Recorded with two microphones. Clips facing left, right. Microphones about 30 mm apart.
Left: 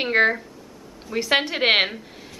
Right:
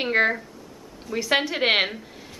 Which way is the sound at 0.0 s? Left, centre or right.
Centre.